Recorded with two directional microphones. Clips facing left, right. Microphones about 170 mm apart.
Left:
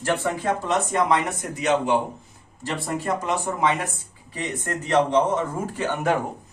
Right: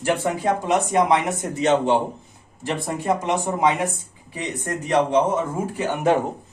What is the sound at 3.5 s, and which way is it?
Speech, 15° right (ahead or behind).